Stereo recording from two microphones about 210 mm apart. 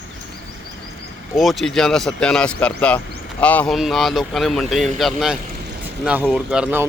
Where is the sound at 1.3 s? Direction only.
Centre (ahead or behind).